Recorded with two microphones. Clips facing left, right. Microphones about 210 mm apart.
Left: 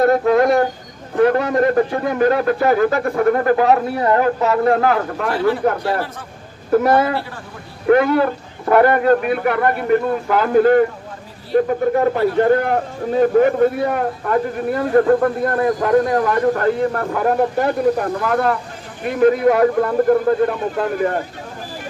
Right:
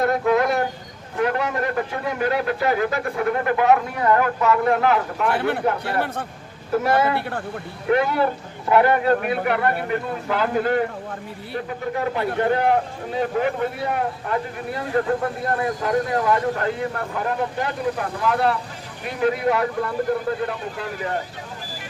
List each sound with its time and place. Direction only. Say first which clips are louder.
0.3 s a man's voice: left 5 dB; 40° left (ahead or behind)
5.3 s a man's voice: left 6 dB; 60° right (ahead or behind)
6.7 s speech: left 5 dB; 45° left (ahead or behind)